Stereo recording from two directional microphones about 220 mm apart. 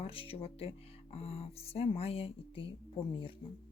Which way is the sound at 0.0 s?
25° left (ahead or behind).